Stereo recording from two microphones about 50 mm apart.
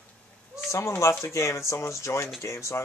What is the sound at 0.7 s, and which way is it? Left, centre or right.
Speech, left.